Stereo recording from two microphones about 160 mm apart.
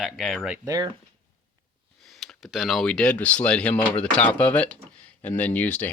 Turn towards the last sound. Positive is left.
turn(degrees=10)  # may be behind; listen again after turning